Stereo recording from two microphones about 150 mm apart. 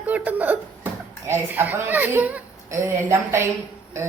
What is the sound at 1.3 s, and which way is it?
A woman's voice, 15° right (ahead or behind).